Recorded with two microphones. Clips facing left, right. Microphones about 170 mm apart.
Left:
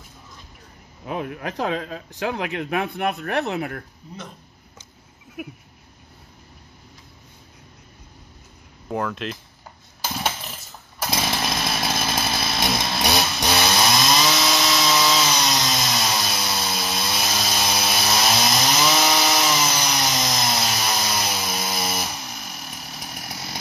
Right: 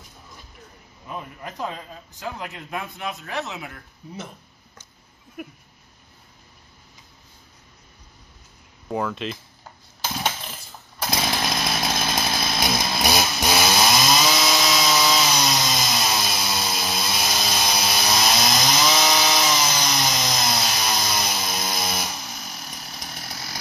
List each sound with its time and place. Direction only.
1.0 s speech: 75° left (ahead or behind); by 3.8 s 60° left (ahead or behind)
5.4 s a sound: 5° left (ahead or behind)
8.8 s speech: centre (ahead or behind)
10.1 s chainsaw: 5° left (ahead or behind)